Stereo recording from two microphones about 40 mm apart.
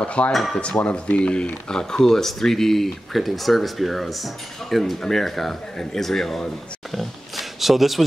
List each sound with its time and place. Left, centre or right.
0.0 s speech: left
0.3 s speech: centre
0.6 s speech: left; by 6.4 s centre
6.9 s a sound: centre